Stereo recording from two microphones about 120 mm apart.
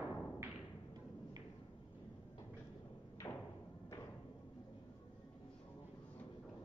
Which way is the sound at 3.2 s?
30° left (ahead or behind).